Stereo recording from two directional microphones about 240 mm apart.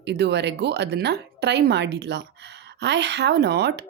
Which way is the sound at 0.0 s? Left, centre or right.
Right.